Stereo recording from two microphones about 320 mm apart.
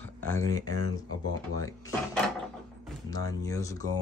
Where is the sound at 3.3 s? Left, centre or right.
Centre.